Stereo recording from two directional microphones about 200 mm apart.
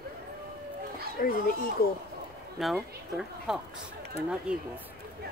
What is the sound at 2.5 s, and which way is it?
Speech, centre (ahead or behind).